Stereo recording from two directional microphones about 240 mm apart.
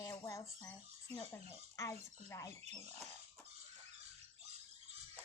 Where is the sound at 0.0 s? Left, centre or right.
Centre.